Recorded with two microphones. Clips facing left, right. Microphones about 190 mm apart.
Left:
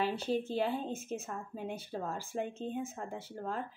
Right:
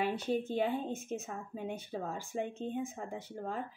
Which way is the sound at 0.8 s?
Centre (ahead or behind).